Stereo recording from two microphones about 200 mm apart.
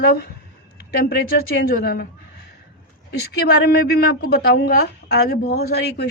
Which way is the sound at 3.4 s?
50° left (ahead or behind).